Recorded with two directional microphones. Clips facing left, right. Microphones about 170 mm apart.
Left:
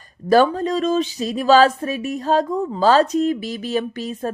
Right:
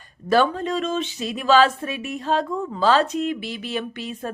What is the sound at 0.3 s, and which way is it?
Speech, 40° left (ahead or behind).